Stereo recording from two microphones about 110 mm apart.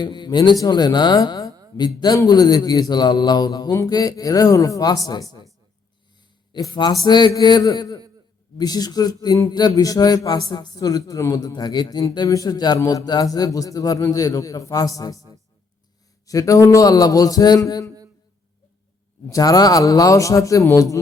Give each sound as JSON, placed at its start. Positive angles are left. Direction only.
{"t": 0.0, "sound": "a man's voice", "side_deg": 45}
{"t": 6.5, "sound": "speech", "side_deg": 40}
{"t": 16.2, "sound": "speech", "side_deg": 30}
{"t": 19.3, "sound": "speech", "side_deg": 35}